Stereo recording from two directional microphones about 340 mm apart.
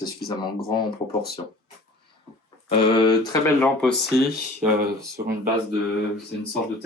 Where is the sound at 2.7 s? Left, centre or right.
Centre.